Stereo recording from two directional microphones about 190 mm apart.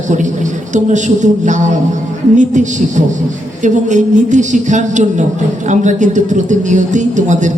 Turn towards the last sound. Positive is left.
turn(degrees=-40)  # may be behind; listen again after turning